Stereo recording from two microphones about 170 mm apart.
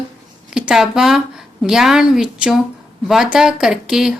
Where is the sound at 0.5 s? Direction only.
5° right (ahead or behind).